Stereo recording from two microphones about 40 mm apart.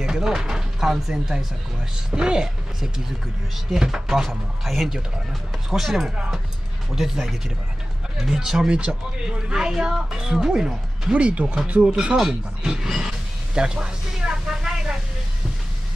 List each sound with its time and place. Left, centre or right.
0.0 s speech: centre
0.7 s speech: centre
4.2 s speech: centre
11.1 s speech: right
12.2 s speech: centre
13.6 s a sound: centre